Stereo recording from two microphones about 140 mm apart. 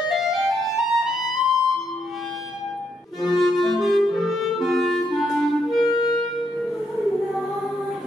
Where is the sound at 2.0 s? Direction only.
Centre (ahead or behind).